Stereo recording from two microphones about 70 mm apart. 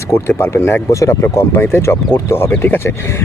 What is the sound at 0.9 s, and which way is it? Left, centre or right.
Speech, left.